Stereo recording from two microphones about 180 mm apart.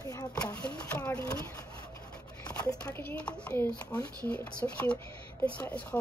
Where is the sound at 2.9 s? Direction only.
10° left (ahead or behind).